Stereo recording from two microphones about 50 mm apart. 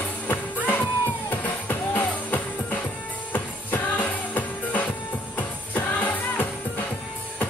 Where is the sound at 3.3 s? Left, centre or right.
Left.